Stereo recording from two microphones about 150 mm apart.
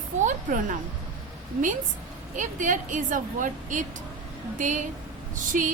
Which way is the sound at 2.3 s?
60° right (ahead or behind).